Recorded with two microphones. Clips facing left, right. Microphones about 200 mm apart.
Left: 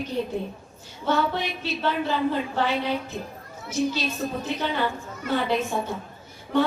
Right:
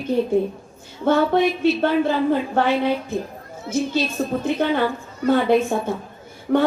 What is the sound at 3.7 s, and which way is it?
Speech, 25° right (ahead or behind).